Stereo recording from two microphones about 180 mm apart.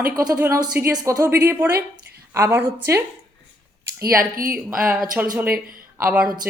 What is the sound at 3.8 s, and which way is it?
Speech, 55° right (ahead or behind).